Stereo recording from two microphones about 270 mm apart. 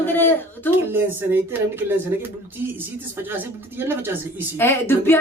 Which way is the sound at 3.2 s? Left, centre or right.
Centre.